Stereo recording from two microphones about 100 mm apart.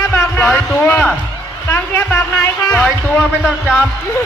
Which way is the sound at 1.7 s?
25° left (ahead or behind).